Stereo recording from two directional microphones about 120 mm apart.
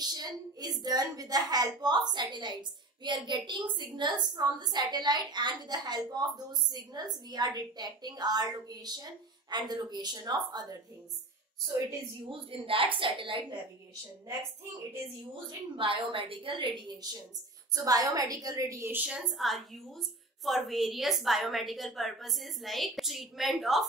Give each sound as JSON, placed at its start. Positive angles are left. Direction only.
{"t": 0.0, "sound": "a woman's voice", "side_deg": -35}
{"t": 12.3, "sound": "a woman's voice", "side_deg": -50}
{"t": 15.7, "sound": "a woman's voice", "side_deg": -45}